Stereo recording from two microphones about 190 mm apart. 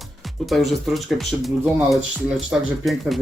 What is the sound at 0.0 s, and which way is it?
Speech, centre (ahead or behind).